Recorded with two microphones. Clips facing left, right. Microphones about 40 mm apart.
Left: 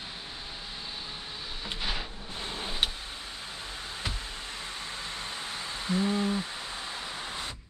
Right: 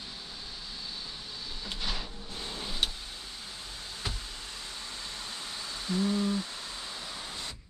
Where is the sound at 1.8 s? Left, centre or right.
Left.